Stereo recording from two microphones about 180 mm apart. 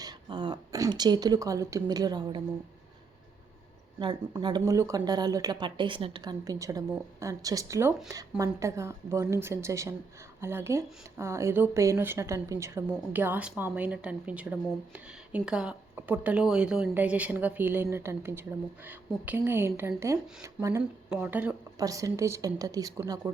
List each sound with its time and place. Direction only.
0.0 s speech: 25° right (ahead or behind)
4.0 s speech: 25° right (ahead or behind); by 21.5 s 10° right (ahead or behind)
21.8 s speech: 20° right (ahead or behind)